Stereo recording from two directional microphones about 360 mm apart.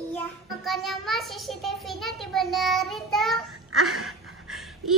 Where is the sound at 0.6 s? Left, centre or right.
Centre.